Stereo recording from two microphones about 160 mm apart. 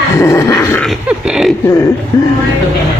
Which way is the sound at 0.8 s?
Centre (ahead or behind).